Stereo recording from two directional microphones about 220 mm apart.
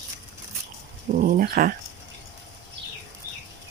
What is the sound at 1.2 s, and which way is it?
Speech, 40° right (ahead or behind).